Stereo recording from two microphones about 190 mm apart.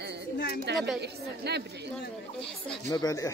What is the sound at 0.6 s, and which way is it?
A woman's voice, 60° right (ahead or behind).